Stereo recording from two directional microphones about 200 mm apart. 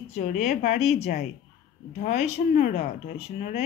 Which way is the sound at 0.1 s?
35° left (ahead or behind).